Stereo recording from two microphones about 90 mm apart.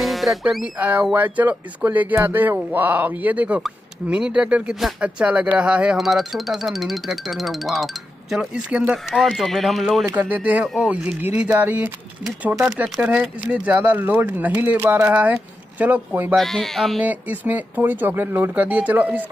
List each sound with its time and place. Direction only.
0.0 s music: centre (ahead or behind)
1.1 s speech: 15° right (ahead or behind)
5.9 s speech: centre (ahead or behind)
9.1 s speech: centre (ahead or behind)
10.0 s speech: 20° right (ahead or behind)
13.0 s speech: 15° right (ahead or behind)
16.3 s speech: 5° left (ahead or behind)
17.0 s speech: 20° right (ahead or behind)